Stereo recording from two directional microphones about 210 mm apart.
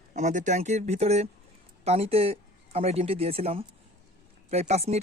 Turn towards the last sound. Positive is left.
turn(degrees=-30)  # may be behind; listen again after turning